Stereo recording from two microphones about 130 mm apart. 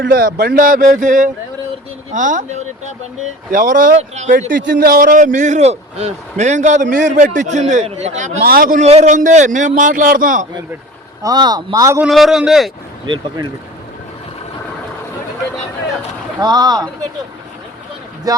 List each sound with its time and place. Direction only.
0.1 s a man's voice: 90° right; by 2.9 s 70° right (ahead or behind)
3.5 s a man's voice: 90° right
8.9 s a man's voice: 65° right (ahead or behind); by 10.4 s 90° right
11.2 s speech: 30° right (ahead or behind)
12.0 s a man's voice: centre (ahead or behind)
13.1 s speech: 30° right (ahead or behind)
16.4 s speech: 30° right (ahead or behind)
18.3 s speech: 30° right (ahead or behind)